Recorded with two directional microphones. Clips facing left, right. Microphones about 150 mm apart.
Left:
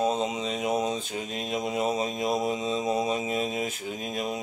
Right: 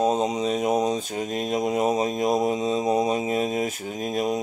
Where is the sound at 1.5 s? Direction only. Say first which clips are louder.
Right 4 dB; 40° right (ahead or behind).